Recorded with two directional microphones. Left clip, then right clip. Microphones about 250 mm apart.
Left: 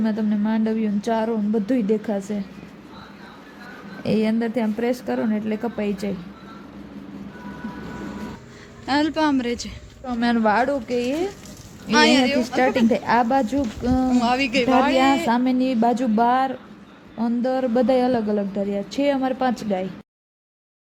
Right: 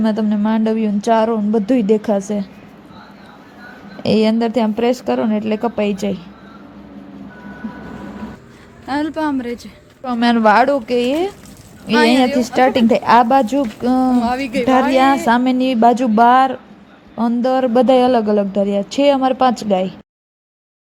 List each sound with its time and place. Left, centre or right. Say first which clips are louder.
0.0 s speech: right 6 dB; centre
4.0 s speech: right 7 dB; centre
8.9 s speech: right 1 dB; centre
10.0 s speech: right 7 dB; centre
11.9 s speech: right 3 dB; centre
12.5 s speech: right 8 dB; centre
14.2 s speech: right 2 dB; centre
14.9 s speech: right 6 dB; centre